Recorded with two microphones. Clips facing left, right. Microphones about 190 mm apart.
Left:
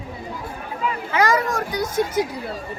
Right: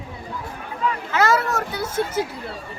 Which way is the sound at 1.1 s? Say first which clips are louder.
Left 1 dB; 15° left (ahead or behind).